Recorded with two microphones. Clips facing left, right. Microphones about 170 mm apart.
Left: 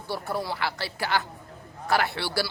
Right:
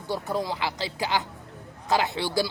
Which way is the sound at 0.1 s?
15° right (ahead or behind).